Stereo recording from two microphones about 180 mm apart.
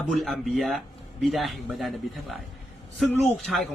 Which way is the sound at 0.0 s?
Centre (ahead or behind).